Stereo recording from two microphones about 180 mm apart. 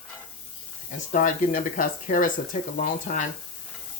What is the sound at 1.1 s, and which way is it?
Speech, 45° left (ahead or behind).